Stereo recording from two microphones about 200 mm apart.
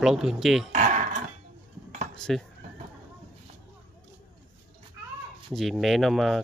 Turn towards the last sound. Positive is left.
turn(degrees=0)  # may be behind; listen again after turning